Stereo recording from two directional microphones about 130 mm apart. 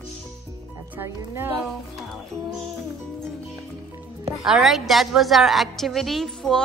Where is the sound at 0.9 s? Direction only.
20° right (ahead or behind).